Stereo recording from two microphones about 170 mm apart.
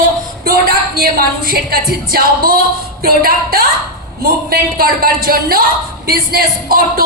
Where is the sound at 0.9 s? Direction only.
60° right (ahead or behind).